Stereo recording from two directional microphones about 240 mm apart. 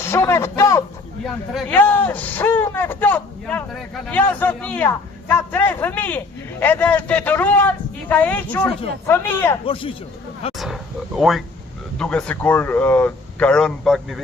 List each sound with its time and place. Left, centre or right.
0.0 s speech: centre
9.6 s a man's voice: left
11.2 s speech: centre